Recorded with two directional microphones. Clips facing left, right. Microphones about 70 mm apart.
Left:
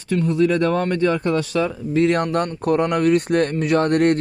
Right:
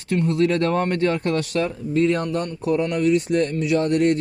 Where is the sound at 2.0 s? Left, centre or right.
Left.